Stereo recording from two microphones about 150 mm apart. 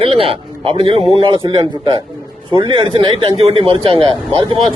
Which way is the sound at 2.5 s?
35° right (ahead or behind).